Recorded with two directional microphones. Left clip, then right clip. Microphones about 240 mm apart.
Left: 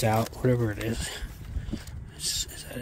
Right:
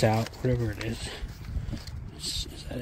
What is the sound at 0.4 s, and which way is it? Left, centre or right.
Speech, centre.